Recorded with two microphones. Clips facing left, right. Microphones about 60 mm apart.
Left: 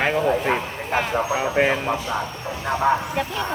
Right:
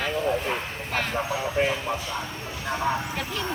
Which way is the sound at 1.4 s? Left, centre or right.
Left.